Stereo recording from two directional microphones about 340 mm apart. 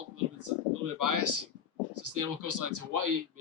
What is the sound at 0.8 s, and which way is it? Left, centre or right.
Speech, right.